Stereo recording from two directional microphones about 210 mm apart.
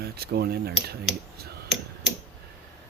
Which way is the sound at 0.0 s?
50° right (ahead or behind).